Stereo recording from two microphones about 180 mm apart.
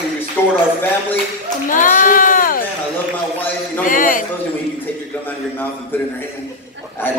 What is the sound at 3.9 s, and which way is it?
Speech, 50° left (ahead or behind).